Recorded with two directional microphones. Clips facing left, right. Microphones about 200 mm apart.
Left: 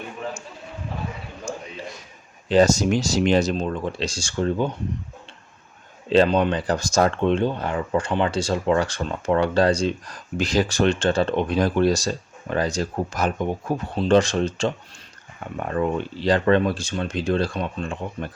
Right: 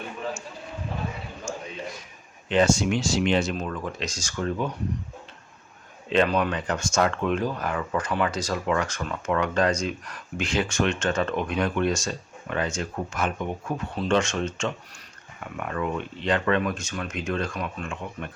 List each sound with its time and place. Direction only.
1.5 s a sound: 35° left (ahead or behind)
2.5 s speech: 40° left (ahead or behind)
3.5 s speech: 30° left (ahead or behind)
6.1 s speech: 30° left (ahead or behind)